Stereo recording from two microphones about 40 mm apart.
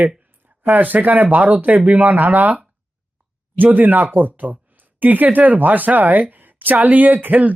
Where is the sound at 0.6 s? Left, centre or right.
Right.